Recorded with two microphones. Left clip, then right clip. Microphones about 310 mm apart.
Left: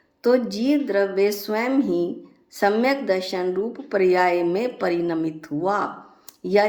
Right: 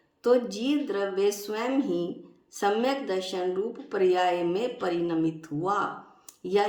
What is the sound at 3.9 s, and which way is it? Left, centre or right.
Speech, centre.